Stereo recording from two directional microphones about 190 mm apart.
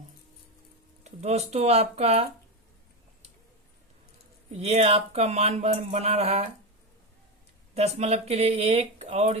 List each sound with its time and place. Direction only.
1.0 s speech: 35° right (ahead or behind)
4.6 s speech: 35° right (ahead or behind)
7.8 s speech: 35° right (ahead or behind)